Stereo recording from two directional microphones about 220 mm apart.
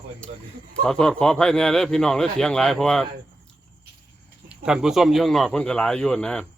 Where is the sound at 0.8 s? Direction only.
5° left (ahead or behind).